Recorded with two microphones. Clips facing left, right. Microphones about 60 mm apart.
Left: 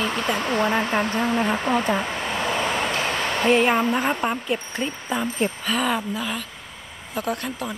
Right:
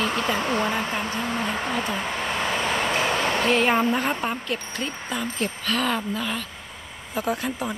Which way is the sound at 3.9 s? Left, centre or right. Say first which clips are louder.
Left 2 dB; centre.